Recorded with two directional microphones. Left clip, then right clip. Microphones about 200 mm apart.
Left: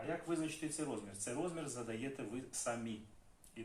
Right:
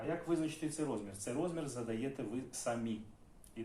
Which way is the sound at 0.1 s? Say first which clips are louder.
Right 3 dB; 10° right (ahead or behind).